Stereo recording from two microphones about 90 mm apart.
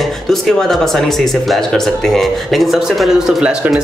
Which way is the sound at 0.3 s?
5° left (ahead or behind).